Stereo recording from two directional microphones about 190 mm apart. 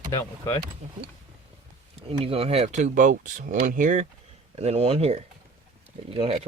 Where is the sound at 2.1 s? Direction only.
30° right (ahead or behind).